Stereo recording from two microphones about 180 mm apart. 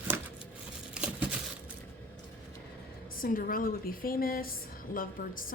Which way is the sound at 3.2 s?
50° left (ahead or behind).